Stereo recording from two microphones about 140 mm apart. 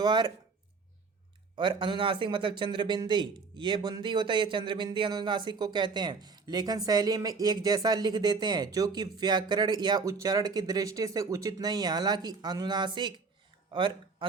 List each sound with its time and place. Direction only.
0.0 s speech: 30° right (ahead or behind)
1.5 s speech: 35° right (ahead or behind)